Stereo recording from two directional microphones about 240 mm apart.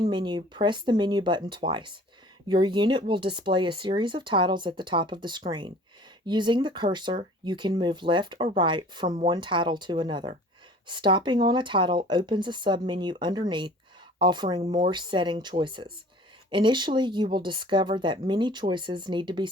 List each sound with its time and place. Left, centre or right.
0.1 s speech: centre
9.0 s speech: right
9.3 s speech: centre